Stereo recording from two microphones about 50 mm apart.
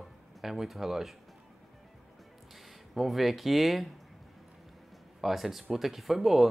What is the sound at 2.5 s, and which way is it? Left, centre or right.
Speech, centre.